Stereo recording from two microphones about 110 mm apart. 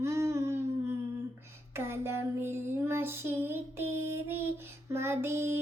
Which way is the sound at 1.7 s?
20° right (ahead or behind).